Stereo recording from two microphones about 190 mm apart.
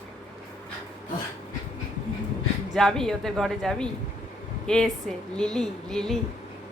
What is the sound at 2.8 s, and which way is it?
A woman's voice, centre (ahead or behind).